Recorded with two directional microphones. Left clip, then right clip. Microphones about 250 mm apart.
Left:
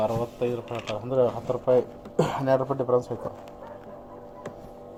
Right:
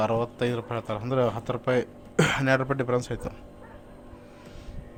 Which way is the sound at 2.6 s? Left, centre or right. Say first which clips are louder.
Left 1 dB; right.